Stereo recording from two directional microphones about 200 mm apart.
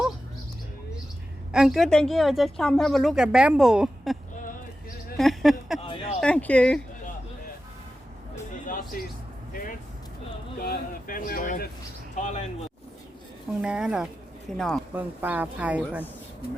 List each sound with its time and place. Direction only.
1.5 s speech: centre (ahead or behind)
5.1 s a sound: centre (ahead or behind)
6.1 s speech: 5° left (ahead or behind)
8.6 s music: 45° left (ahead or behind)
9.5 s vehicle: 45° left (ahead or behind)
10.6 s speech: 45° left (ahead or behind)
13.6 s speech: 5° right (ahead or behind)
14.9 s speech: 10° right (ahead or behind)